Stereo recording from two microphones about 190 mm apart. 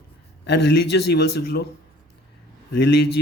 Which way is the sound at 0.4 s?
60° left (ahead or behind).